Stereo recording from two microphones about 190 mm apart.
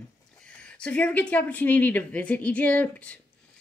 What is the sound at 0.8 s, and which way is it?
A woman's voice, 5° left (ahead or behind).